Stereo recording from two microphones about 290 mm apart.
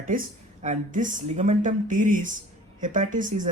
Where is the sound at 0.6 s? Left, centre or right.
Right.